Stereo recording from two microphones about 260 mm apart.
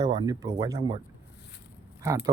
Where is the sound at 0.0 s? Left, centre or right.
Centre.